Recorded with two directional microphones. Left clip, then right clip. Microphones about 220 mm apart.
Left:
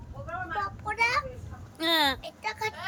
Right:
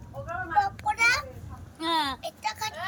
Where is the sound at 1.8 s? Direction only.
20° left (ahead or behind).